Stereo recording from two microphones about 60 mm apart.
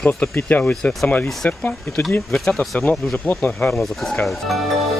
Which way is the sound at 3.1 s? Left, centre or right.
Left.